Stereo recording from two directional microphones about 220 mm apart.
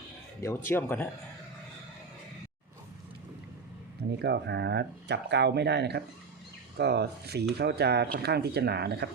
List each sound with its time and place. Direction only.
0.4 s speech: 10° left (ahead or behind)
4.2 s speech: 50° right (ahead or behind)